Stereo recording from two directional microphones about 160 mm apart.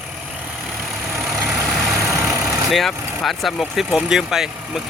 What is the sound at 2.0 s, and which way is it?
Vehicle, 20° right (ahead or behind).